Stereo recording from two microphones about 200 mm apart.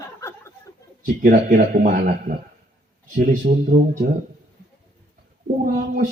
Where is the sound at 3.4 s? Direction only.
40° right (ahead or behind).